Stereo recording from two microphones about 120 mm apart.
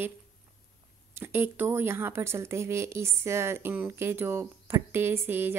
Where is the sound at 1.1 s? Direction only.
20° right (ahead or behind).